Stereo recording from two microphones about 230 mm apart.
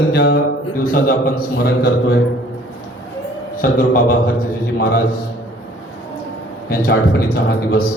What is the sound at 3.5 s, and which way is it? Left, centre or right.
Speech, left.